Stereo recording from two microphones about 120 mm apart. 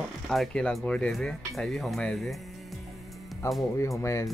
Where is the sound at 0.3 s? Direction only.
5° left (ahead or behind).